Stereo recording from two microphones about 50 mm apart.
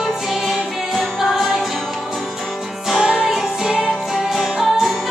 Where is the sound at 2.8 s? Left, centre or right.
Centre.